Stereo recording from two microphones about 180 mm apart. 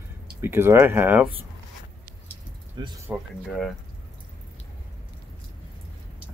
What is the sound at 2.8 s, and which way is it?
Speech, 25° right (ahead or behind).